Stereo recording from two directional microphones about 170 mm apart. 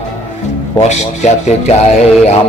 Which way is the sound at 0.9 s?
40° left (ahead or behind).